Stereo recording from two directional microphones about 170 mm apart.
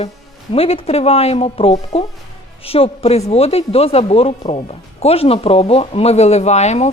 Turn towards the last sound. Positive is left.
turn(degrees=40)  # may be behind; listen again after turning